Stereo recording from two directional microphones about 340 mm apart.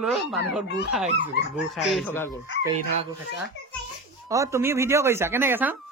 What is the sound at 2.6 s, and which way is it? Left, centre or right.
Speech, centre.